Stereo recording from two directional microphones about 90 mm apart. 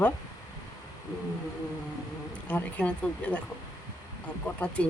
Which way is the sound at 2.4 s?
15° left (ahead or behind).